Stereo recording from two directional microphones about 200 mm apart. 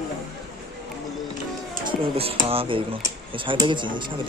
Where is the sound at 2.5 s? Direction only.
25° right (ahead or behind).